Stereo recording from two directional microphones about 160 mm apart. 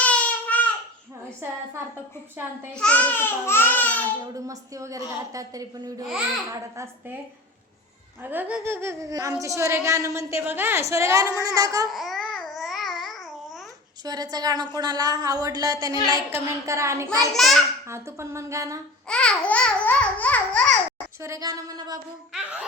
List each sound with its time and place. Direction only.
0.0 s baby cry: 10° left (ahead or behind)
2.7 s babbling: 5° left (ahead or behind)
4.4 s a woman's voice: 20° right (ahead or behind)
8.2 s speech: 10° right (ahead or behind)
11.9 s speech: centre (ahead or behind)
12.5 s babbling: centre (ahead or behind)
14.0 s a woman's voice: 25° right (ahead or behind)
17.3 s a child's voice: centre (ahead or behind)
17.8 s speech: 15° right (ahead or behind)
19.0 s babbling: 5° left (ahead or behind)
21.2 s a woman's voice: 20° right (ahead or behind)
22.3 s speech: 5° right (ahead or behind)